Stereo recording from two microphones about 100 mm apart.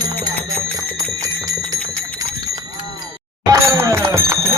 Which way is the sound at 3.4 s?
30° right (ahead or behind).